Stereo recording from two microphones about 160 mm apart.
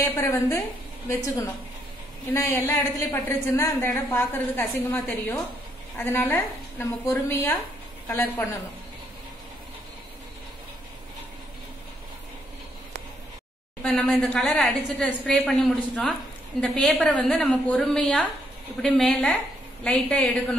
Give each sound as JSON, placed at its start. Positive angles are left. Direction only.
{"t": 0.0, "sound": "a woman's voice", "side_deg": 15}
{"t": 13.8, "sound": "a woman's voice", "side_deg": 0}
{"t": 16.6, "sound": "a woman's voice", "side_deg": 5}